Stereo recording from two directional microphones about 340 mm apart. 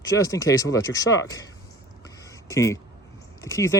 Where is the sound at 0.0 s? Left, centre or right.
Centre.